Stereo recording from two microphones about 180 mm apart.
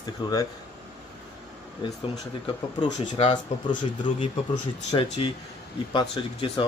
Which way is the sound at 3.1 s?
25° left (ahead or behind).